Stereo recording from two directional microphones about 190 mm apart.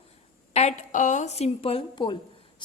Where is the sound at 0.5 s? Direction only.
40° left (ahead or behind).